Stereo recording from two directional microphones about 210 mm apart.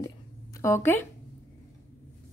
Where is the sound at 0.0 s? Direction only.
15° left (ahead or behind).